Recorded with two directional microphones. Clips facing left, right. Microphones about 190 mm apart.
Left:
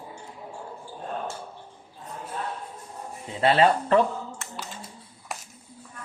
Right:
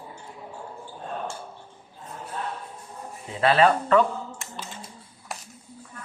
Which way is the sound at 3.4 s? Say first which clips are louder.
Even; 30° left (ahead or behind).